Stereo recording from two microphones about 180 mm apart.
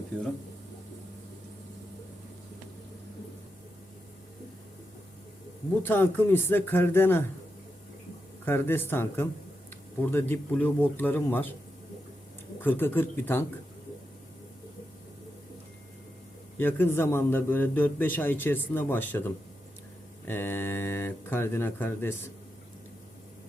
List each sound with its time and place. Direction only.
5.8 s a man's voice: 10° left (ahead or behind)
8.4 s a man's voice: 10° left (ahead or behind)
12.6 s a man's voice: 10° left (ahead or behind)
16.6 s a man's voice: 10° left (ahead or behind)